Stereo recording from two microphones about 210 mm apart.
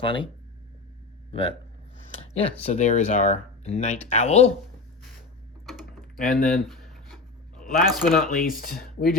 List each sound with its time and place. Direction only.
0.0 s speech: 25° left (ahead or behind)
1.3 s speech: 25° left (ahead or behind)
6.3 s a sound: centre (ahead or behind)
8.3 s speech: 40° left (ahead or behind)